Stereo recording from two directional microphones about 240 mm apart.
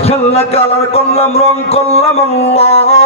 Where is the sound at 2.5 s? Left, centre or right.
Left.